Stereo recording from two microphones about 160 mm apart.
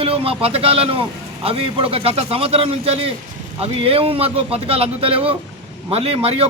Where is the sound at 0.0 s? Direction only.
35° right (ahead or behind).